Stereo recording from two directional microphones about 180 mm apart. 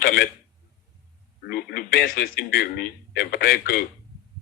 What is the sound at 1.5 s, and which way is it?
A man's voice, 60° left (ahead or behind).